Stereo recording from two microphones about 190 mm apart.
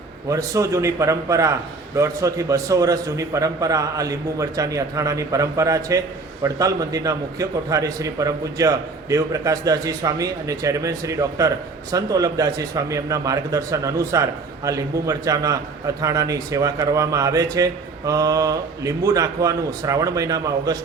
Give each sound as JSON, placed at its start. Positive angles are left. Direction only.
{"t": 0.3, "sound": "a man's voice", "side_deg": -15}